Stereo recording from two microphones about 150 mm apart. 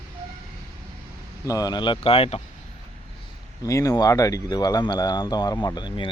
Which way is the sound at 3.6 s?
20° left (ahead or behind).